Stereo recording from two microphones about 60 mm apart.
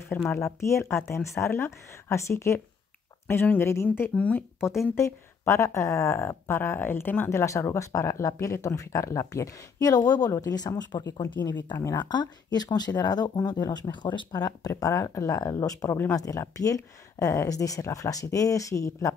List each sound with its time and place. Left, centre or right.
0.3 s speech: left
4.1 s speech: left
4.9 s speech: left
7.2 s speech: left
16.1 s speech: left